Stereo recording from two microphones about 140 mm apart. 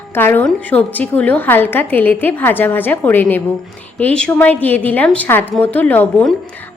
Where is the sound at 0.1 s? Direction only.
15° left (ahead or behind).